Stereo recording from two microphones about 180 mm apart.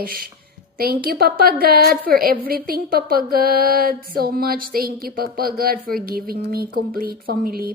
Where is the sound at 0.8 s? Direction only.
55° right (ahead or behind).